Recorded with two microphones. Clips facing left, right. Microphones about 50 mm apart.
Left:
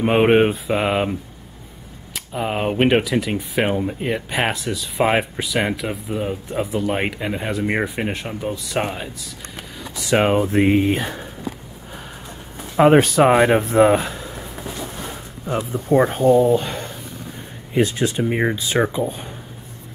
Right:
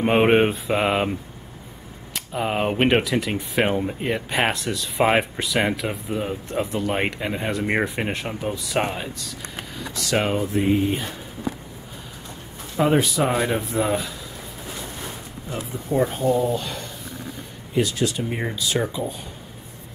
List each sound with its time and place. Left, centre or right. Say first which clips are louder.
0.0 s speech: left 2 dB; centre
2.1 s speech: left 1 dB; centre
9.9 s speech: left 5 dB; left
10.5 s speech: left 4 dB; left
12.7 s speech: left 7 dB; left
15.7 s speech: left 5 dB; left